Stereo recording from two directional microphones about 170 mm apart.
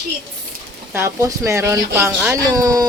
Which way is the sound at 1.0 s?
15° right (ahead or behind).